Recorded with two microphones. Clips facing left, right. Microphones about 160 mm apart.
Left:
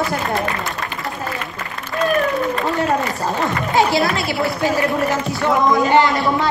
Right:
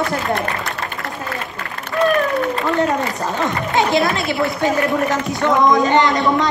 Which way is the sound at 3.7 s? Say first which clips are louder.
Even; 20° right (ahead or behind).